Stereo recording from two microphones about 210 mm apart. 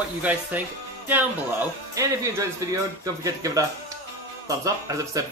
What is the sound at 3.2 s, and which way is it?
Speech, 15° right (ahead or behind).